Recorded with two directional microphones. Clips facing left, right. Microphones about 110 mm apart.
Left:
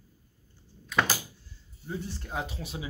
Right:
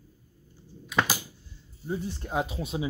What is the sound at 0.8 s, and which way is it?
Door, 5° right (ahead or behind).